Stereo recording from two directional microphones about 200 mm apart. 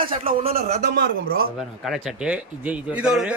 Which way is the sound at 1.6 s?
Centre (ahead or behind).